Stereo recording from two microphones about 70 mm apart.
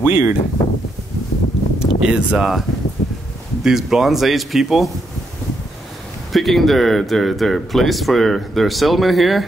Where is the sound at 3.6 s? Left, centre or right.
Centre.